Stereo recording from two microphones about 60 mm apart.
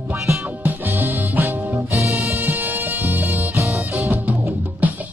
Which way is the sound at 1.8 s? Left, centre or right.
Right.